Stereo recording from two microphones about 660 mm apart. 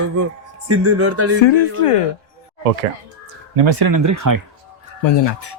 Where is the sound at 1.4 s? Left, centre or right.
Left.